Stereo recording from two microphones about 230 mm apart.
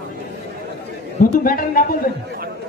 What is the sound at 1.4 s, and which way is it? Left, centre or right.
Speech, left.